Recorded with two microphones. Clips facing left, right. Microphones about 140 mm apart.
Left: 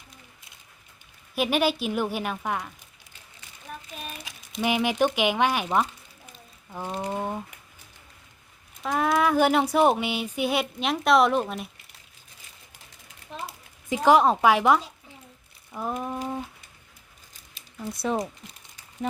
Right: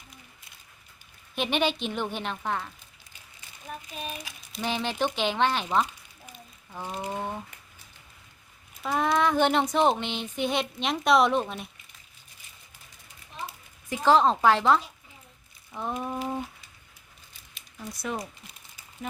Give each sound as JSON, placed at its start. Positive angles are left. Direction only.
{"t": 1.4, "sound": "speech", "side_deg": 5}
{"t": 4.3, "sound": "speech", "side_deg": 15}
{"t": 6.7, "sound": "a sound", "side_deg": 15}
{"t": 7.1, "sound": "speech", "side_deg": 10}
{"t": 8.8, "sound": "speech", "side_deg": 0}
{"t": 13.9, "sound": "speech", "side_deg": 15}
{"t": 15.7, "sound": "a sound", "side_deg": 5}
{"t": 17.8, "sound": "speech", "side_deg": 30}